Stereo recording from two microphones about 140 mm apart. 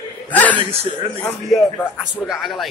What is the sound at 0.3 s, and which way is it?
Chuckle, 10° left (ahead or behind).